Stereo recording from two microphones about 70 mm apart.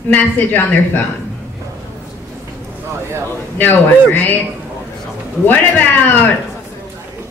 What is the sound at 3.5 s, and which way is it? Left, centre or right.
Speech, left.